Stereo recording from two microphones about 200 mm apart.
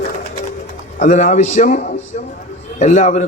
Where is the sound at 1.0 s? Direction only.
40° left (ahead or behind).